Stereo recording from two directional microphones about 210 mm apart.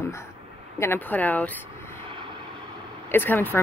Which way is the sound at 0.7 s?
10° left (ahead or behind).